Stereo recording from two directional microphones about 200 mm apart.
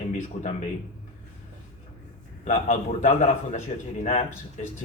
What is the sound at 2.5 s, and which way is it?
Speech, 35° left (ahead or behind).